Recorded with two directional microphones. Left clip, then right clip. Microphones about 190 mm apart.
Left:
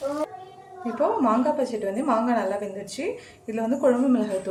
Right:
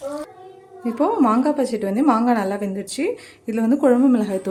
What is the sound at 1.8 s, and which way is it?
Speech, 50° right (ahead or behind).